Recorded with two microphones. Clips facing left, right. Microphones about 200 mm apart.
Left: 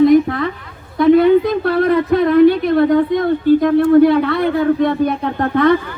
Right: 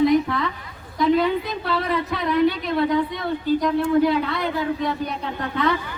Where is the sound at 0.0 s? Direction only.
50° left (ahead or behind).